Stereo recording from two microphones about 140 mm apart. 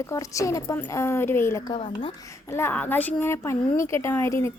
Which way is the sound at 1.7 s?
40° left (ahead or behind).